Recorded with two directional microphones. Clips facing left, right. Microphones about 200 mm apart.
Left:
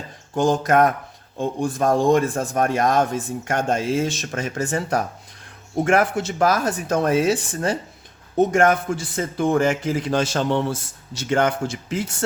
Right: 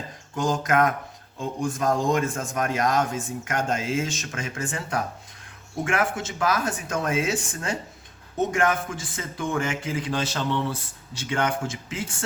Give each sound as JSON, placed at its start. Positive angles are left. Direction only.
{"t": 0.3, "sound": "speech", "side_deg": 30}
{"t": 1.9, "sound": "speech", "side_deg": 30}